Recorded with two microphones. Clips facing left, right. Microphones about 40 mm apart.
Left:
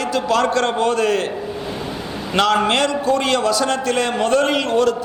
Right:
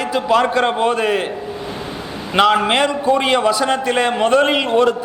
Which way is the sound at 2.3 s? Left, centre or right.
Centre.